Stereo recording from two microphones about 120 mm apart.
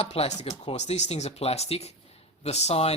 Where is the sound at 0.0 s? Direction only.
60° left (ahead or behind).